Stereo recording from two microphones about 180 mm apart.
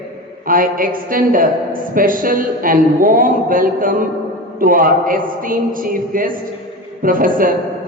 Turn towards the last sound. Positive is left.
turn(degrees=-50)  # may be behind; listen again after turning